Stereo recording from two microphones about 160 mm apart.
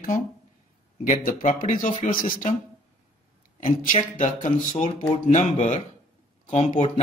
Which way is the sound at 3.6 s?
55° left (ahead or behind).